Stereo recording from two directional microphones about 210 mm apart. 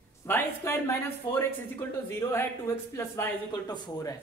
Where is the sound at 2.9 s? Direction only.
10° left (ahead or behind).